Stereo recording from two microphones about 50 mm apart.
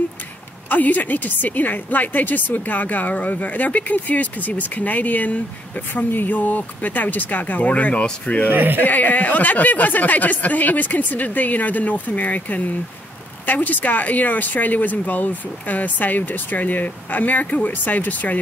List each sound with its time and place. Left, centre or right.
0.7 s a woman's voice: left
8.5 s speech: right
8.8 s a woman's voice: left